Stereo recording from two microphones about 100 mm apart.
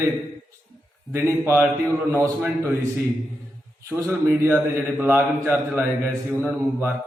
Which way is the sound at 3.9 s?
25° right (ahead or behind).